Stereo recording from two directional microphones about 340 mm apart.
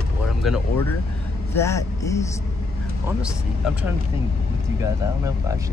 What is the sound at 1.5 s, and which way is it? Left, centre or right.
Speech, centre.